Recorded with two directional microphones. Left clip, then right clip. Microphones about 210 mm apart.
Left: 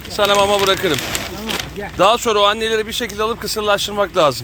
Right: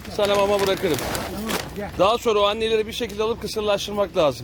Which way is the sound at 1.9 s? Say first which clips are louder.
Left 5 dB; centre (ahead or behind).